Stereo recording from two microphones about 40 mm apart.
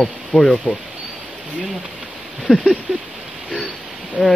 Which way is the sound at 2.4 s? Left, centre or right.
Centre.